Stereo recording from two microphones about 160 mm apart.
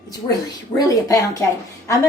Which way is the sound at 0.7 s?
20° left (ahead or behind).